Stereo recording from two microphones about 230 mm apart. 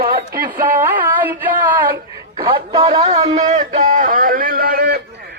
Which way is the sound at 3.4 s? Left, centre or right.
Right.